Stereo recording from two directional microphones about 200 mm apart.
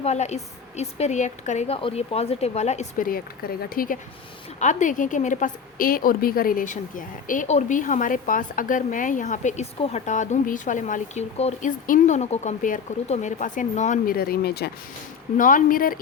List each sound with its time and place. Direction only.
0.0 s a woman's voice: 35° left (ahead or behind); by 14.7 s 55° left (ahead or behind)
15.4 s speech: 40° left (ahead or behind)